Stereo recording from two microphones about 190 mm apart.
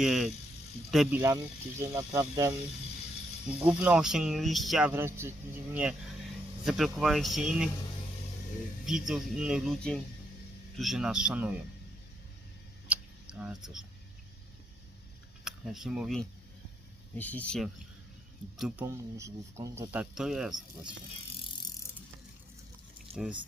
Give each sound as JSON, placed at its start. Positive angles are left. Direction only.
{"t": 0.0, "sound": "speech", "side_deg": 0}
{"t": 1.8, "sound": "speech", "side_deg": -15}
{"t": 3.6, "sound": "speech", "side_deg": -5}
{"t": 4.9, "sound": "speech", "side_deg": -10}
{"t": 8.9, "sound": "speech", "side_deg": -5}
{"t": 12.9, "sound": "a sound", "side_deg": -5}
{"t": 15.4, "sound": "speech", "side_deg": 0}
{"t": 17.2, "sound": "speech", "side_deg": 10}
{"t": 18.9, "sound": "speech", "side_deg": -15}
{"t": 23.1, "sound": "speech", "side_deg": -30}